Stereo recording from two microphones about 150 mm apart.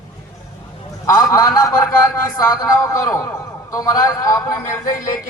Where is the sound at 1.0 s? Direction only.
20° left (ahead or behind).